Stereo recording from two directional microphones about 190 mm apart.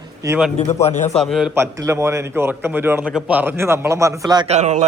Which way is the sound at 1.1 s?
Centre (ahead or behind).